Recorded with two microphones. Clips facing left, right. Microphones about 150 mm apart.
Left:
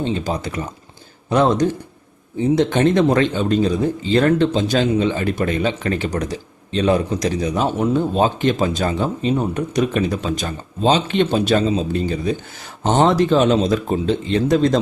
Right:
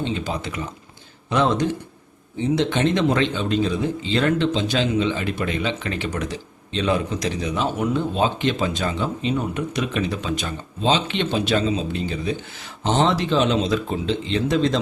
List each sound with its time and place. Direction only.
0.0 s speech: 40° left (ahead or behind)